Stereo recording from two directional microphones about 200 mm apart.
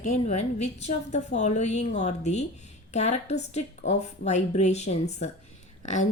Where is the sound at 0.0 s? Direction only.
35° left (ahead or behind).